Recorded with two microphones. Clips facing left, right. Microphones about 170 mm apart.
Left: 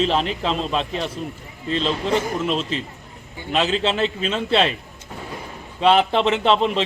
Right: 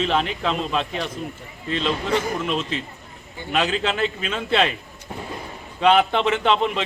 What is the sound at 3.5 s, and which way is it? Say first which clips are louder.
A man's voice: left 2 dB; 30° left (ahead or behind).